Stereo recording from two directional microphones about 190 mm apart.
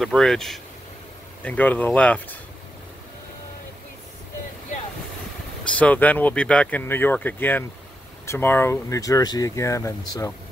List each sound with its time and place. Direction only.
0.0 s speech: centre (ahead or behind)
5.8 s speech: 10° left (ahead or behind)